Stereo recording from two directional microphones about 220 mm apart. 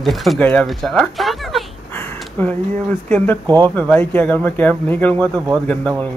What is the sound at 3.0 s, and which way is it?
Speech, 5° left (ahead or behind).